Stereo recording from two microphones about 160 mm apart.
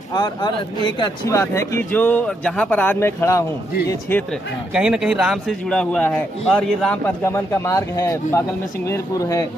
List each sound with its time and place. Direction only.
0.1 s speech: 25° left (ahead or behind)
1.4 s speech: 15° left (ahead or behind)
4.7 s a man's voice: 5° right (ahead or behind); by 9.5 s 20° left (ahead or behind)